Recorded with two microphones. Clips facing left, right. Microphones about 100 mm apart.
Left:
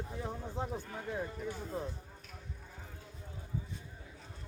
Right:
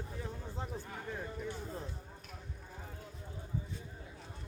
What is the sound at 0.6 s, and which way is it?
Speech, 15° left (ahead or behind).